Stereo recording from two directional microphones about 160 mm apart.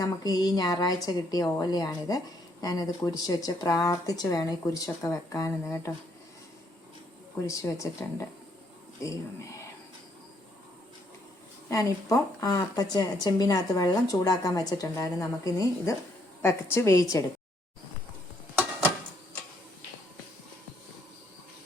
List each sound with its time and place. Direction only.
0.0 s speech: 25° left (ahead or behind)
7.4 s speech: 20° left (ahead or behind)
11.7 s a woman's voice: 20° left (ahead or behind)